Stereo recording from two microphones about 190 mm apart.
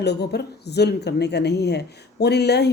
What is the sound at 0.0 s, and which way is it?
Speech, 60° left (ahead or behind).